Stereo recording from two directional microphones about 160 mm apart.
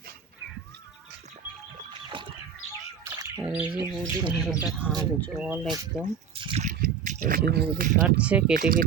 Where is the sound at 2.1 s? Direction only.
30° right (ahead or behind).